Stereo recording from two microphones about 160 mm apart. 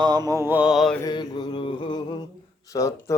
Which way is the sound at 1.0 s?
25° left (ahead or behind).